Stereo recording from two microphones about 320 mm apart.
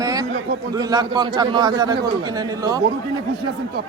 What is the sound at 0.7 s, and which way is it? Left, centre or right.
A man's voice, centre.